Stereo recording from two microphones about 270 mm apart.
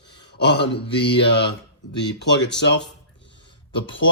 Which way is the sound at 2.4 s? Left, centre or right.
Left.